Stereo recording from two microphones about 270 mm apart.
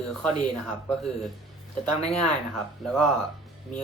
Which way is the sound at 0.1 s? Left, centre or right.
Centre.